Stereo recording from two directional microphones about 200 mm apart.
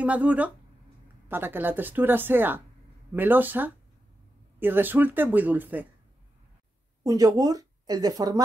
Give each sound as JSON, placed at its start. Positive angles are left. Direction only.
{"t": 0.0, "sound": "speech", "side_deg": -5}
{"t": 7.0, "sound": "speech", "side_deg": -15}